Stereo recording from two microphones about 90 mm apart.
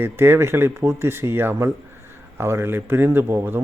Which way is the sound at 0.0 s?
25° right (ahead or behind).